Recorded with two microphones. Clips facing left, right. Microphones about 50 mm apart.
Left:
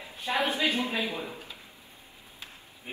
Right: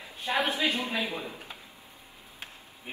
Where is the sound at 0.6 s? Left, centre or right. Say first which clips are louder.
Left 1 dB; left.